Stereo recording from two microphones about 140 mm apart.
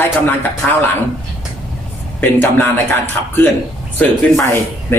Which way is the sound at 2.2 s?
15° left (ahead or behind).